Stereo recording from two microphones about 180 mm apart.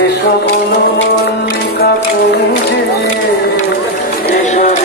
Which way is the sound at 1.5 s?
70° left (ahead or behind).